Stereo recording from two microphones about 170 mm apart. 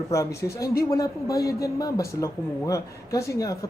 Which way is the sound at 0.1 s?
20° left (ahead or behind).